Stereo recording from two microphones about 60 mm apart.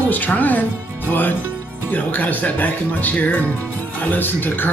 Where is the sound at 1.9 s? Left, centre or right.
Left.